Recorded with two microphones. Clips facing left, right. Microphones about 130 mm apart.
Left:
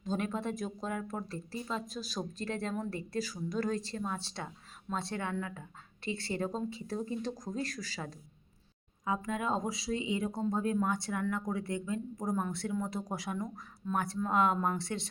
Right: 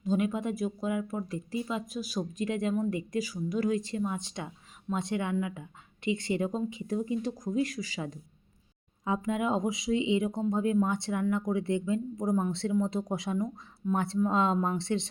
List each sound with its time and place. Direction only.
0.0 s speech: 10° right (ahead or behind)
9.0 s speech: 20° right (ahead or behind)